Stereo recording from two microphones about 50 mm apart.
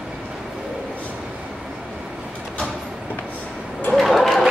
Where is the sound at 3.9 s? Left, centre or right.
Centre.